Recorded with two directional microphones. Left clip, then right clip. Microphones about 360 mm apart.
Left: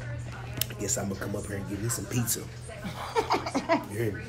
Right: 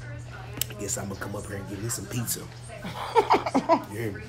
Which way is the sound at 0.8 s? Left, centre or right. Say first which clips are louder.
Left 4 dB; centre.